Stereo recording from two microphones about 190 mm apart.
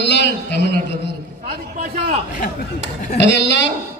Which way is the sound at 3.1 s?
65° left (ahead or behind).